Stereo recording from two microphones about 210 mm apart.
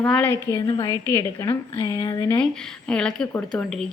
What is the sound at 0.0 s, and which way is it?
Speech, 5° left (ahead or behind).